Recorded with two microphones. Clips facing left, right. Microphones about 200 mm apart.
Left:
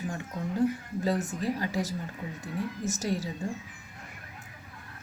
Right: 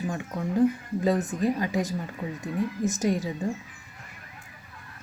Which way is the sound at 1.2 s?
20° right (ahead or behind).